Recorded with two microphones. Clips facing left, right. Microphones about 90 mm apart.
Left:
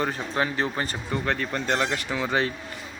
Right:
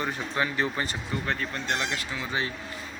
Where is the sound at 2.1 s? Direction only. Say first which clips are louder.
Left 6 dB; 70° left (ahead or behind).